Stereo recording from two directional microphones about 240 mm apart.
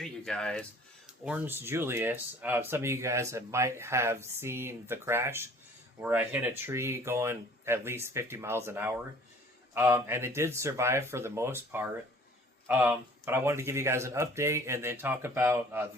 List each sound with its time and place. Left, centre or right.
0.0 s speech: centre